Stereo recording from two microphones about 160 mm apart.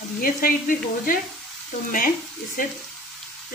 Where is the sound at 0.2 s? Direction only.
65° left (ahead or behind).